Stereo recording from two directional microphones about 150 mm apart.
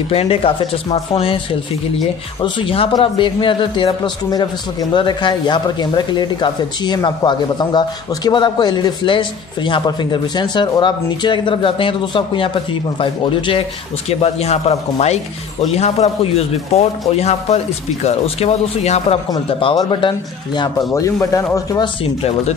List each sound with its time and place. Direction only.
0.1 s a man's voice: 40° left (ahead or behind)
19.3 s a man's voice: 30° left (ahead or behind)
20.9 s speech: 20° left (ahead or behind)